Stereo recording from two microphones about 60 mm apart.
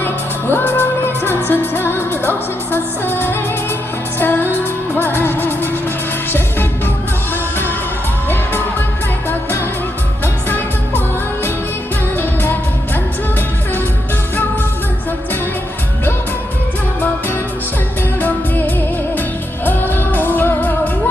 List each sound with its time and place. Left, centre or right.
0.0 s music: left
12.1 s music of asia: left
18.2 s music: left